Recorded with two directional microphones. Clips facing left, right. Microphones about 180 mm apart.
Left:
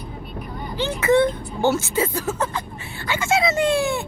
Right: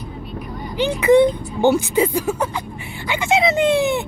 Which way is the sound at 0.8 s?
15° right (ahead or behind).